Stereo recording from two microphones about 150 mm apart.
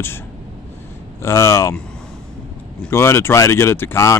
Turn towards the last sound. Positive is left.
turn(degrees=20)  # may be behind; listen again after turning